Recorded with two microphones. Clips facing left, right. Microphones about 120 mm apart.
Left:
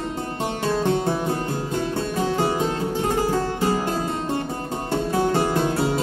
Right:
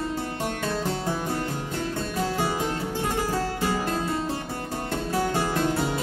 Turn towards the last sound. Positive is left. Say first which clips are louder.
# left 5 dB
turn(degrees=25)  # may be behind; listen again after turning